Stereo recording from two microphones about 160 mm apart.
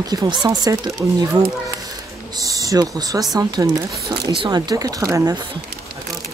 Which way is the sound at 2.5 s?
20° right (ahead or behind).